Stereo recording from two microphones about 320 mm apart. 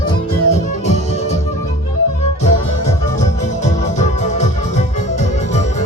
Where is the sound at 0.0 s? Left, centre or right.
Centre.